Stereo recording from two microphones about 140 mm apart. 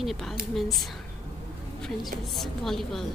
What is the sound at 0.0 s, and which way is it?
Speech, centre (ahead or behind).